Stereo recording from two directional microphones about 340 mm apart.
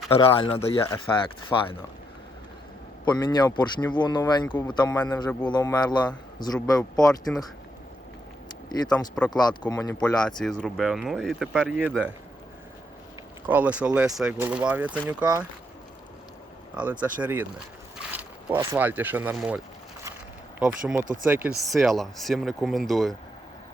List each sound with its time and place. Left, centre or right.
0.1 s speech: centre
3.1 s speech: centre
8.9 s speech: centre
13.5 s speech: centre
16.7 s speech: centre